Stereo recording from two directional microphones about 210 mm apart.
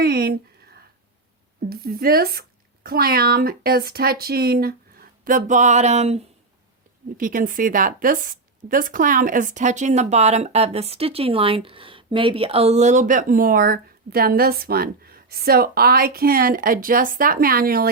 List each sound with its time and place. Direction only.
0.0 s speech: 45° right (ahead or behind)
1.7 s speech: 45° right (ahead or behind)